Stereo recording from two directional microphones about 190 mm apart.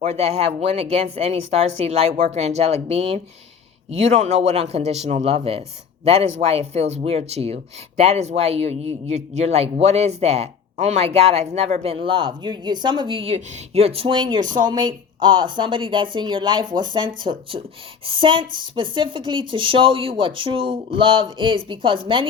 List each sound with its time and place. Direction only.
0.0 s a woman's voice: 35° right (ahead or behind)